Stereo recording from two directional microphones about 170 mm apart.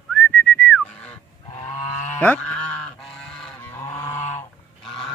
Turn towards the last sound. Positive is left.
turn(degrees=40)  # may be behind; listen again after turning